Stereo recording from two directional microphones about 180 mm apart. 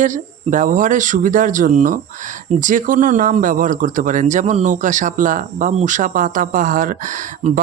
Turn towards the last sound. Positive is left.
turn(degrees=-40)  # may be behind; listen again after turning